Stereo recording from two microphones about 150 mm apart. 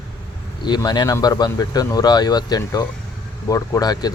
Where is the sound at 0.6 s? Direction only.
30° left (ahead or behind).